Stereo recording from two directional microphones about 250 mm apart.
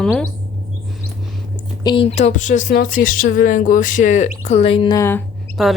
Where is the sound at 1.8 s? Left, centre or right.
Left.